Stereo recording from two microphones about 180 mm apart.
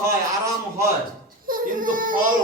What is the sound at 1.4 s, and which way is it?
Speech, 50° right (ahead or behind).